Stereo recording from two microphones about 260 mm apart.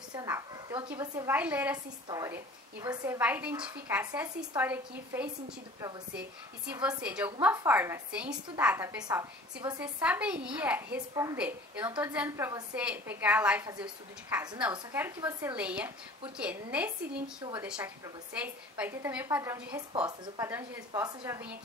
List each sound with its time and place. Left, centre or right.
0.1 s a woman's voice: centre
17.4 s a woman's voice: centre
17.6 s a woman's voice: centre